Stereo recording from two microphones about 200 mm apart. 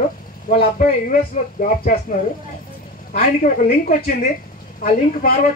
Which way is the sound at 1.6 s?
45° left (ahead or behind).